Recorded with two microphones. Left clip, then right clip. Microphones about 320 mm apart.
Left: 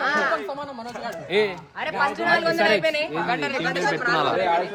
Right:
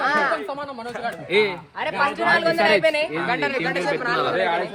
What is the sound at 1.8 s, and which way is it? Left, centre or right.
A man's voice, centre.